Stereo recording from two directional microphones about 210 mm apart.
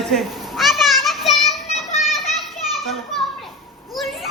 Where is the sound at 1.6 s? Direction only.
30° left (ahead or behind).